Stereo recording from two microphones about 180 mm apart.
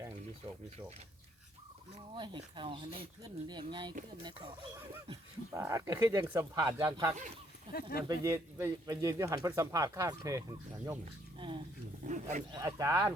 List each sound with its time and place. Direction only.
0.4 s speech: 20° right (ahead or behind)
2.0 s speech: 25° right (ahead or behind)
5.5 s speech: 15° right (ahead or behind)
7.7 s speech: 55° left (ahead or behind)
8.0 s speech: 20° right (ahead or behind)
12.0 s speech: 45° right (ahead or behind)
12.5 s speech: 15° right (ahead or behind)